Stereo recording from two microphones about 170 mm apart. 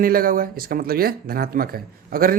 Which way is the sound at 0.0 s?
60° right (ahead or behind).